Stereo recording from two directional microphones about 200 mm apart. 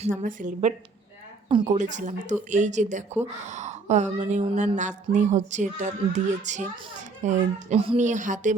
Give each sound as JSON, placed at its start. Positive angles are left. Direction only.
{"t": 0.0, "sound": "a woman's voice", "side_deg": -40}
{"t": 1.5, "sound": "speech", "side_deg": -25}
{"t": 1.7, "sound": "a woman's voice", "side_deg": -35}